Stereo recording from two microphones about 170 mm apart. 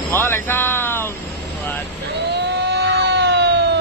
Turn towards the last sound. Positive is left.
turn(degrees=-85)